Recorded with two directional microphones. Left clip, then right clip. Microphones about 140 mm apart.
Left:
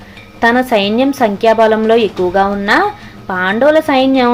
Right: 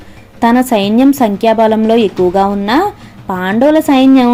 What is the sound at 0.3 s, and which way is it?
Speech, 45° right (ahead or behind).